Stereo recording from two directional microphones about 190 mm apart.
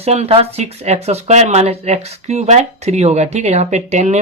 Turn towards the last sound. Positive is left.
turn(degrees=-35)  # may be behind; listen again after turning